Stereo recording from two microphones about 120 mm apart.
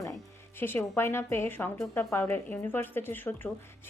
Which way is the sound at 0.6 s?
20° left (ahead or behind).